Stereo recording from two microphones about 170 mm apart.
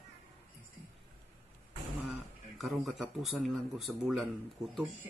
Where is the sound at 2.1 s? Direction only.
Centre (ahead or behind).